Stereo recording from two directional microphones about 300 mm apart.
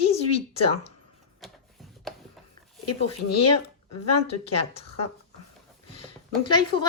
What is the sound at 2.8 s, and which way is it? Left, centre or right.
Speech, left.